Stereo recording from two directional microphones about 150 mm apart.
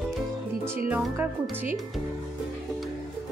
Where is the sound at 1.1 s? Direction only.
15° right (ahead or behind).